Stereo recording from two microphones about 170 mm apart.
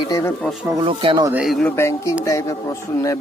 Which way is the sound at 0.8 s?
30° right (ahead or behind).